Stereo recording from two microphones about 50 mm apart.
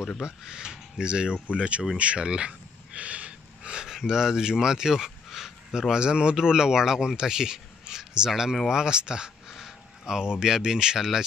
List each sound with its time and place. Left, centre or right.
0.2 s speech: centre
2.0 s gasp: right
3.8 s speech: centre